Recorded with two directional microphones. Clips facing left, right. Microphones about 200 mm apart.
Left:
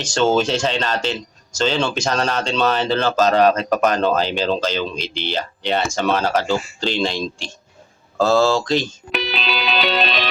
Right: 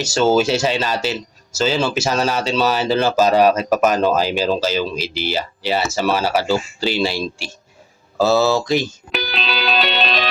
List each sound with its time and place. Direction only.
0.0 s speech: 5° right (ahead or behind)